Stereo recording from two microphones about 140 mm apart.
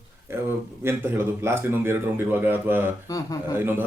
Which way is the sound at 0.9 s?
15° right (ahead or behind).